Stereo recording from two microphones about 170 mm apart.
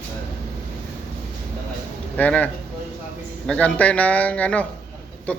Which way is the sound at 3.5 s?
5° left (ahead or behind).